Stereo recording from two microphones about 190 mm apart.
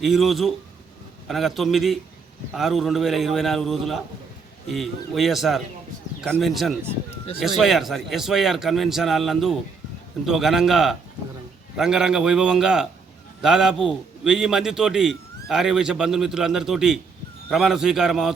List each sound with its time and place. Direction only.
0.0 s a man's voice: centre (ahead or behind)